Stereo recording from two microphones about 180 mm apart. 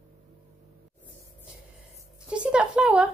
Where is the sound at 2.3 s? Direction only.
5° right (ahead or behind).